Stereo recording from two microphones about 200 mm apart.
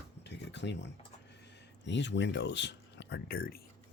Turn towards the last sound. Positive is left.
turn(degrees=50)  # may be behind; listen again after turning